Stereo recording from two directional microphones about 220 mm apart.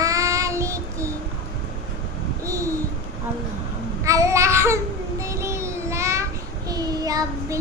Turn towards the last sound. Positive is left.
turn(degrees=-15)  # may be behind; listen again after turning